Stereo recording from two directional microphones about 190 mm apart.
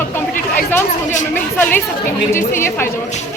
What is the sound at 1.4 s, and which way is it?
Speech, 10° left (ahead or behind).